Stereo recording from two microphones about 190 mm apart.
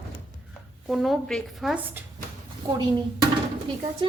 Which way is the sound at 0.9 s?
Centre (ahead or behind).